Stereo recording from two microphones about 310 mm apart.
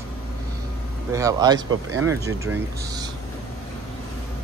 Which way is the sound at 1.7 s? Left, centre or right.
Right.